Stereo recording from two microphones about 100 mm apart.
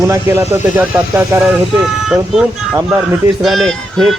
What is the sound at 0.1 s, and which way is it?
Speech, 25° right (ahead or behind).